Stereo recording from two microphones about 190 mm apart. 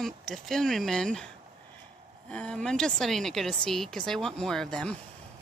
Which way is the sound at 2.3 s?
5° left (ahead or behind).